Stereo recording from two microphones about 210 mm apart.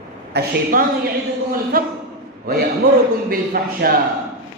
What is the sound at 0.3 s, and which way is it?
A woman's voice, 40° right (ahead or behind).